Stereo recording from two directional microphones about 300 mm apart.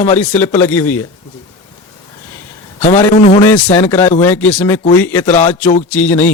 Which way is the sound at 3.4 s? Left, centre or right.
Centre.